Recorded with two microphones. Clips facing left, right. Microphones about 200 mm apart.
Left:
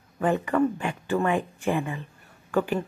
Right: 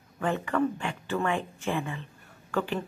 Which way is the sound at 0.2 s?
15° left (ahead or behind).